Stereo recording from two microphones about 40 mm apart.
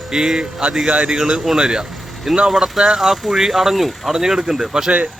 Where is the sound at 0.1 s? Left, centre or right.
Centre.